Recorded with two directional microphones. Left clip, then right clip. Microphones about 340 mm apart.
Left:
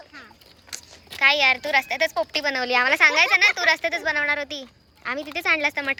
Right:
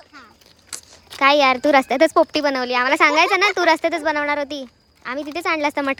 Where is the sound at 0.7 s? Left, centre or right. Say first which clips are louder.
Right 2 dB; centre.